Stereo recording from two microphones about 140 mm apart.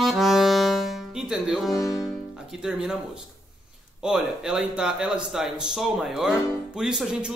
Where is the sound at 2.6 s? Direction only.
5° right (ahead or behind).